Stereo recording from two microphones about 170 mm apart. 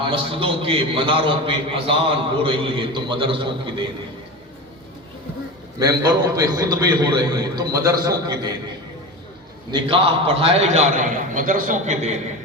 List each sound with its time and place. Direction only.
0.0 s a man's voice: 30° right (ahead or behind)
5.8 s a man's voice: 20° right (ahead or behind)
9.7 s a man's voice: 35° right (ahead or behind)